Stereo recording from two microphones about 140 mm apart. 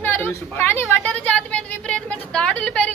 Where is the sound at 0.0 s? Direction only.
15° left (ahead or behind).